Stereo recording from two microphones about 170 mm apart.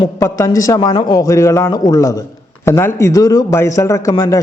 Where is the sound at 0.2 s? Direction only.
15° left (ahead or behind).